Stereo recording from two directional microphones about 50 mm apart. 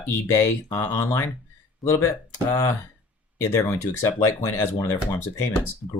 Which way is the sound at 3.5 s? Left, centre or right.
Left.